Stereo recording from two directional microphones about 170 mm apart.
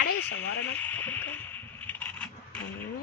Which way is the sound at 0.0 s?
90° left.